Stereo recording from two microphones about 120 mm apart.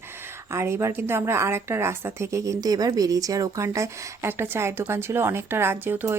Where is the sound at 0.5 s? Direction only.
20° right (ahead or behind).